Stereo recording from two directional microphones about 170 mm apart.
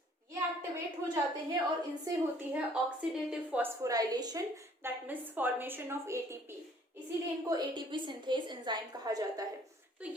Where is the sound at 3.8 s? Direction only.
20° right (ahead or behind).